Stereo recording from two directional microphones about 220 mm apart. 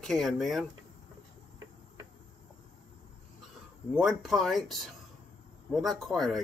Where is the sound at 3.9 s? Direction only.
5° right (ahead or behind).